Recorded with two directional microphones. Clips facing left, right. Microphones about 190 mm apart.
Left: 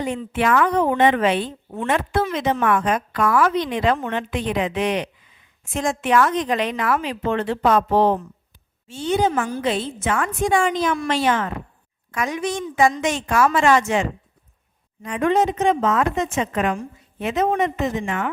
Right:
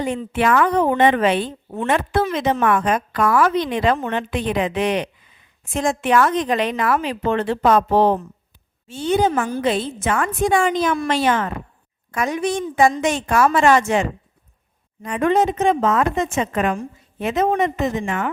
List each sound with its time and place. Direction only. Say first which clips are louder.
0.1 s a woman's voice: right 1 dB; 40° right (ahead or behind)
9.2 s a woman's voice: right 2 dB; 45° right (ahead or behind)
13.7 s a woman's voice: right 2 dB; 55° right (ahead or behind)
15.8 s a woman's voice: right 2 dB; 35° right (ahead or behind)